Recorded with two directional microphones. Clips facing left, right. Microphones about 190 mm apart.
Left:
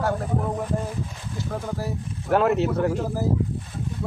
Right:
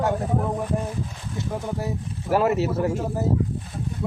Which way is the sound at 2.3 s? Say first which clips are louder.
Left 1 dB; 5° right (ahead or behind).